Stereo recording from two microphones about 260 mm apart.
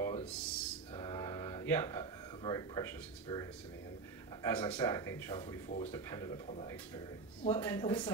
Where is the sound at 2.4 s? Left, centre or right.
Centre.